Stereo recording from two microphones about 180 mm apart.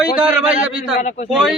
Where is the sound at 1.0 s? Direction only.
40° left (ahead or behind).